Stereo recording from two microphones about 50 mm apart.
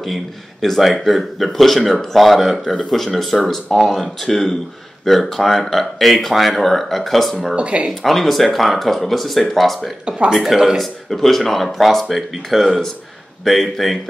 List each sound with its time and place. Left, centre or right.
0.0 s speech: centre
7.5 s speech: right
8.0 s speech: centre
10.0 s speech: centre
10.3 s speech: centre